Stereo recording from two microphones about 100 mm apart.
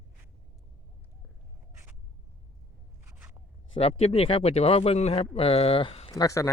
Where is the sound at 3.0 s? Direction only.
25° right (ahead or behind).